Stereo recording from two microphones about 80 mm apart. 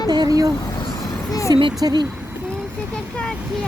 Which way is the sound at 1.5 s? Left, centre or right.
Right.